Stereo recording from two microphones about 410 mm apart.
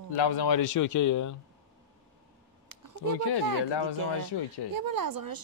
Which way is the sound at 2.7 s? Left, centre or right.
Right.